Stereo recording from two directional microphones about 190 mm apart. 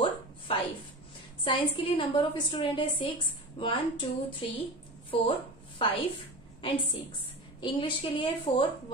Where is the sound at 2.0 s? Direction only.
25° left (ahead or behind).